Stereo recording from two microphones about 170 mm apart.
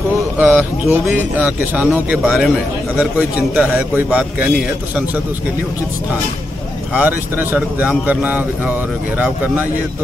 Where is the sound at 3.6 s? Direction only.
10° right (ahead or behind).